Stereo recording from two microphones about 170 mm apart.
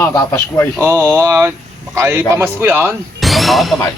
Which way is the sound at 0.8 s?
15° right (ahead or behind).